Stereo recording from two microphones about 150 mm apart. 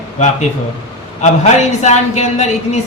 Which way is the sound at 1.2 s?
50° left (ahead or behind).